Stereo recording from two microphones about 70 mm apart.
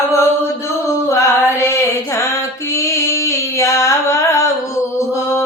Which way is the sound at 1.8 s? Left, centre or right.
Left.